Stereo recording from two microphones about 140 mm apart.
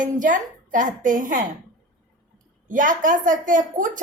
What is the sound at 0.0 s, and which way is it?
A woman's voice, 65° right (ahead or behind).